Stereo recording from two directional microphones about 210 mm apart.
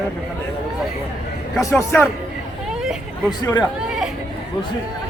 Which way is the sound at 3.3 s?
20° left (ahead or behind).